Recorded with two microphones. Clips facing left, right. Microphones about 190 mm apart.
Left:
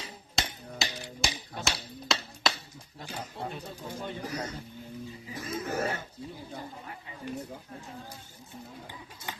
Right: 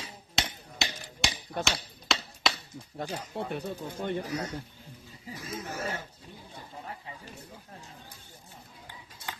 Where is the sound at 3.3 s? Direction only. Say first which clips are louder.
Right 6 dB; 60° right (ahead or behind).